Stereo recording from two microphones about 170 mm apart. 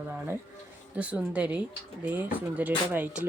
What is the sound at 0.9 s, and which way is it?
A woman's voice, 10° right (ahead or behind).